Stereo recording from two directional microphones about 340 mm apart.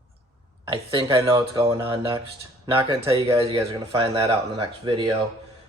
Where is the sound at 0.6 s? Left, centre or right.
Centre.